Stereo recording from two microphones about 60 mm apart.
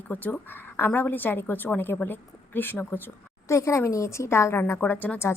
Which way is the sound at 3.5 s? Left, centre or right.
Left.